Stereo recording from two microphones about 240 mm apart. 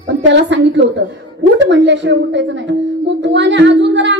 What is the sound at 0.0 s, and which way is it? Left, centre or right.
A woman's voice, right.